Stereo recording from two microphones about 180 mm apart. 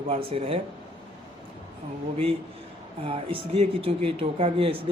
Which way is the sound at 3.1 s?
35° right (ahead or behind).